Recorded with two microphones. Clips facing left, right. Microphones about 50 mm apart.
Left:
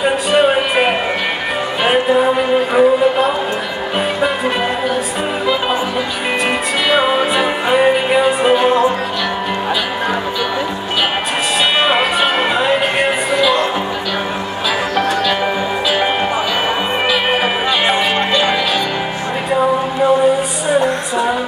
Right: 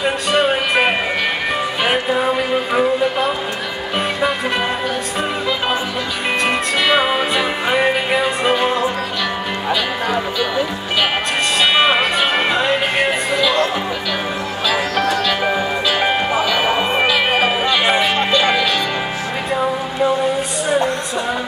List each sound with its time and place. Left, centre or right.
0.0 s music: centre
1.9 s speech: centre
6.9 s music: centre
11.8 s music: centre
17.3 s music: centre